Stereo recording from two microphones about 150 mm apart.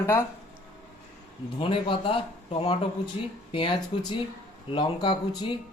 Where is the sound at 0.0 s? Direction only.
20° left (ahead or behind).